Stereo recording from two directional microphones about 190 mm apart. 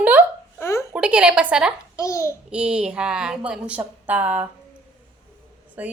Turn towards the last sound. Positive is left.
turn(degrees=-10)  # may be behind; listen again after turning